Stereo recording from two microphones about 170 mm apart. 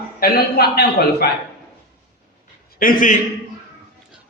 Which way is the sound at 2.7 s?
55° left (ahead or behind).